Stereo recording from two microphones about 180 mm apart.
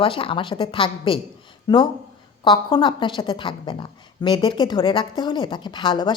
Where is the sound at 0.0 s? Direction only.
30° left (ahead or behind).